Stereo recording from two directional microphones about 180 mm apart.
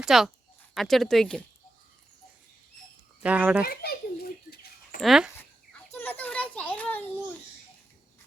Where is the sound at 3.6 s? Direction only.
55° left (ahead or behind).